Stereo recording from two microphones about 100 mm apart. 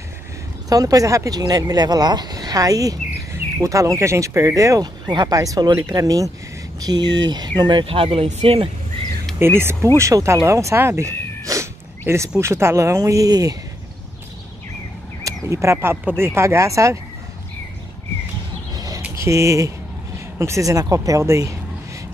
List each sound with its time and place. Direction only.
0.7 s speech: 40° right (ahead or behind)
5.0 s speech: 45° right (ahead or behind)
7.8 s speech: 65° right (ahead or behind)
9.4 s speech: 25° right (ahead or behind)
12.1 s speech: 15° right (ahead or behind)
12.4 s speech: 25° right (ahead or behind)
15.2 s speech: 30° right (ahead or behind)
19.1 s speech: 30° right (ahead or behind)